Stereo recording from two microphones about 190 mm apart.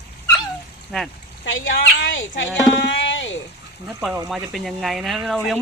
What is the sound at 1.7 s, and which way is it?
Speech, 80° left.